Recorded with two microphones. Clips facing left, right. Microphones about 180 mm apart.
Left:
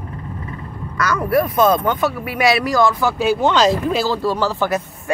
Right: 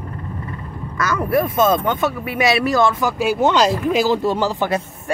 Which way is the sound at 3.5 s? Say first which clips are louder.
Left 1 dB; 10° right (ahead or behind).